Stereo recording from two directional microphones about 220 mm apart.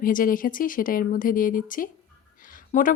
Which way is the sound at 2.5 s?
35° left (ahead or behind).